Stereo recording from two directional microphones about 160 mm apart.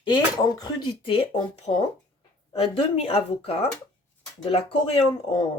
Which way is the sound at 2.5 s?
35° left (ahead or behind).